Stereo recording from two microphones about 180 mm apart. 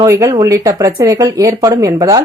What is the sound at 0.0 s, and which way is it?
Speech, 20° right (ahead or behind).